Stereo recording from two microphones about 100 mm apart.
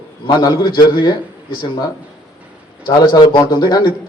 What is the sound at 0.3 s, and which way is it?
Speech, 45° left (ahead or behind).